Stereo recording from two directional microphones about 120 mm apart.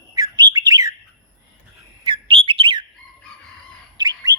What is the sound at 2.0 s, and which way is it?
Bird, 45° right (ahead or behind).